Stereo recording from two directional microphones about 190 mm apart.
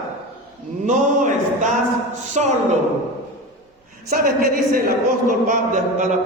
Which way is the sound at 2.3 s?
40° right (ahead or behind).